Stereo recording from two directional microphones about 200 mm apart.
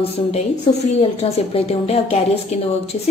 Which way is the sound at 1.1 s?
30° left (ahead or behind).